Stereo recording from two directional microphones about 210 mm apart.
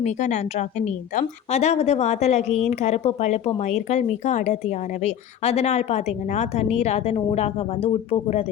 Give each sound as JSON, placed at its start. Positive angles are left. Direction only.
{"t": 0.0, "sound": "a woman's voice", "side_deg": 35}